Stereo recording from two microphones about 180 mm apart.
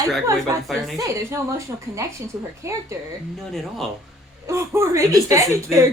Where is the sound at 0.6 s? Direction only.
Centre (ahead or behind).